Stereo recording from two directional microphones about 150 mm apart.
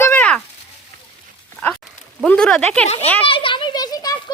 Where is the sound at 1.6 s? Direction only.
10° left (ahead or behind).